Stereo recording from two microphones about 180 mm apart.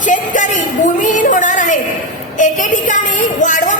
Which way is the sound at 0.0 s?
45° left (ahead or behind).